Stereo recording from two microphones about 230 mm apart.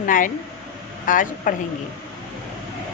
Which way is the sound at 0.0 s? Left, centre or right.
Left.